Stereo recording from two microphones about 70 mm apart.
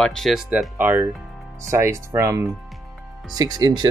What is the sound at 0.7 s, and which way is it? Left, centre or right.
Speech, right.